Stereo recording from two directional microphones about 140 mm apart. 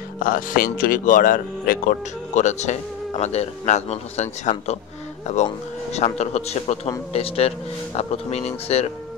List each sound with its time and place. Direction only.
0.2 s speech: 90° left; by 8.9 s 50° left (ahead or behind)